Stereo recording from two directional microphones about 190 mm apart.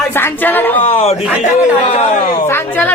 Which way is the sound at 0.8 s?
30° left (ahead or behind).